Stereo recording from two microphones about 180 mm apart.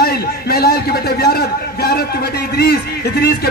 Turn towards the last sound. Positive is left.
turn(degrees=60)  # may be behind; listen again after turning